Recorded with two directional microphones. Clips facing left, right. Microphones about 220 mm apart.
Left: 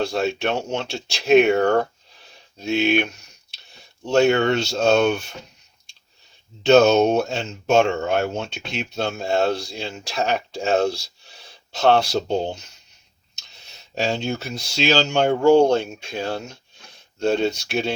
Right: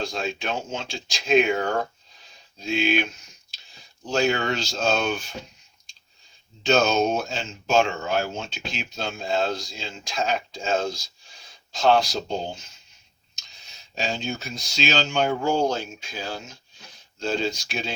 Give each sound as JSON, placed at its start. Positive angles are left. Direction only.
{"t": 0.0, "sound": "speech", "side_deg": 65}
{"t": 6.6, "sound": "speech", "side_deg": 65}
{"t": 13.9, "sound": "speech", "side_deg": 70}